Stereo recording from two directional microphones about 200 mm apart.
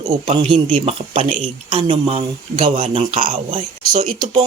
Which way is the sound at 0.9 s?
30° right (ahead or behind).